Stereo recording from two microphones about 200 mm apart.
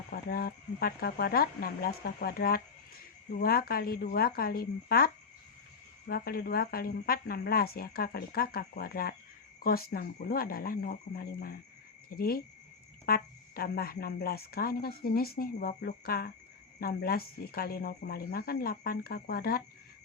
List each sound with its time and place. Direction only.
0.1 s speech: 50° left (ahead or behind)